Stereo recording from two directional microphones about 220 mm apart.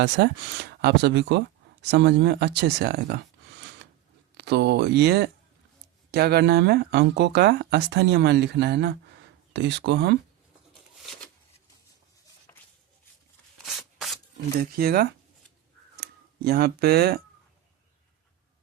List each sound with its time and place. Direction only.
0.0 s speech: 50° right (ahead or behind)
4.4 s speech: 50° right (ahead or behind)
13.7 s rub: centre (ahead or behind)
14.6 s speech: 45° right (ahead or behind)